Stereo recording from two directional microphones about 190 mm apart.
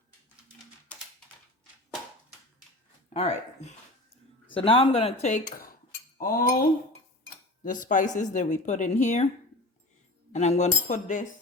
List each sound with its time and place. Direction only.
3.1 s speech: 35° left (ahead or behind)
6.1 s cutlery: 50° left (ahead or behind)
7.6 s speech: 45° left (ahead or behind)
10.3 s speech: 35° left (ahead or behind)